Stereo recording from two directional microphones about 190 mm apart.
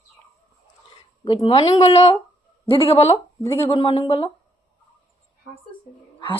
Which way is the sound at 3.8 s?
30° left (ahead or behind).